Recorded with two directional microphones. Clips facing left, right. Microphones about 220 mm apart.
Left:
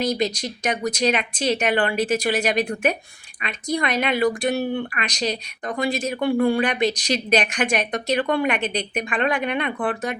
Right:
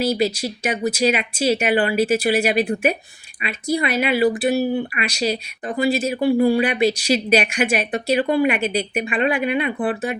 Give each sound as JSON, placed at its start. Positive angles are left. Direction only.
{"t": 0.0, "sound": "speech", "side_deg": -5}